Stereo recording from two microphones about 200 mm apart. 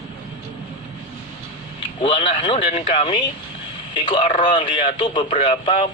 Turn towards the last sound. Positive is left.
turn(degrees=25)  # may be behind; listen again after turning